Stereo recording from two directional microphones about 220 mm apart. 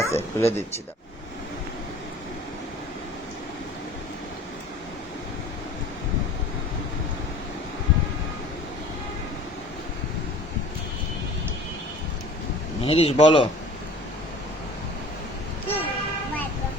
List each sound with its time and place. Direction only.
0.0 s speech: 10° left (ahead or behind)
12.8 s speech: 25° left (ahead or behind)
15.6 s vehicle: 10° left (ahead or behind)